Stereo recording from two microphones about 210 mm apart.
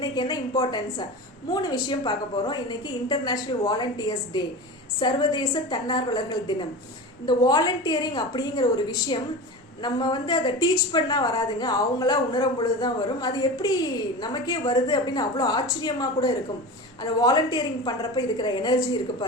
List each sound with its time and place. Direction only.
0.0 s a woman's voice: 20° left (ahead or behind)